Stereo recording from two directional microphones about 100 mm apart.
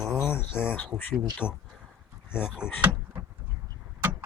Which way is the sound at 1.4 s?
10° right (ahead or behind).